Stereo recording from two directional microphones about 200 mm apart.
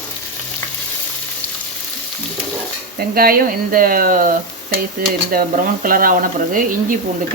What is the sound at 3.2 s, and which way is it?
Speech, 45° right (ahead or behind).